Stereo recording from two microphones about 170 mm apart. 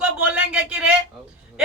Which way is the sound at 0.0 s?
5° right (ahead or behind).